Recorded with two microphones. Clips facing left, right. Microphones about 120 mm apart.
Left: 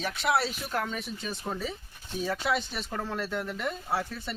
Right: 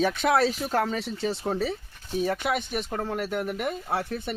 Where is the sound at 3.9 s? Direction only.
55° right (ahead or behind).